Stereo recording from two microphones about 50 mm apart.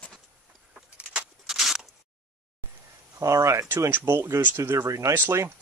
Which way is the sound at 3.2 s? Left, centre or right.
Right.